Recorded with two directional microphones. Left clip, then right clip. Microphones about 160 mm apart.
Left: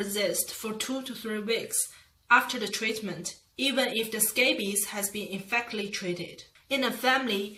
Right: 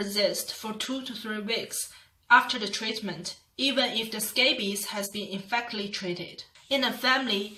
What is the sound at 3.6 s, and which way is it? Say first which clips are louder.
Speech: right 1 dB; 20° left (ahead or behind).